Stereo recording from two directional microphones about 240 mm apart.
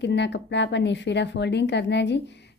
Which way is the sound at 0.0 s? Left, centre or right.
Left.